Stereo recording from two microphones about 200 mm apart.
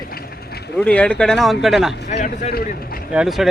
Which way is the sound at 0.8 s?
5° left (ahead or behind).